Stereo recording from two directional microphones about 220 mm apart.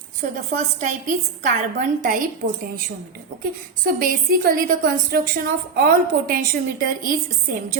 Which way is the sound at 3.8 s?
40° right (ahead or behind).